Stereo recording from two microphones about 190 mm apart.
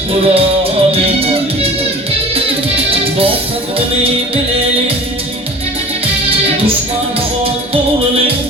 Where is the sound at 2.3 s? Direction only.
30° right (ahead or behind).